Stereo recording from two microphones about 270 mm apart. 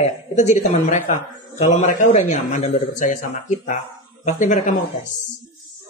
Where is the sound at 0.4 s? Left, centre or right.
Left.